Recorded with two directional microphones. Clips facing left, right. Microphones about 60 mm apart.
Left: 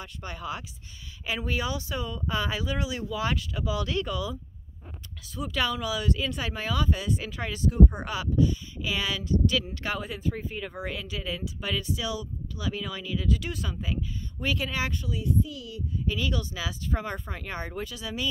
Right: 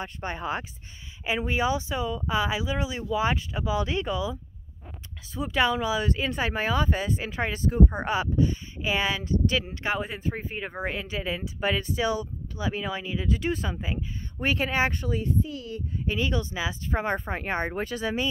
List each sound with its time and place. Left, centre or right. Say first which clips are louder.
0.0 s speech: right 5 dB; right
1.2 s speech: right 4 dB; right